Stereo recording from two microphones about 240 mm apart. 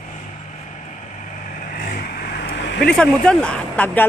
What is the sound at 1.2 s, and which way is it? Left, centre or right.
Vehicle, left.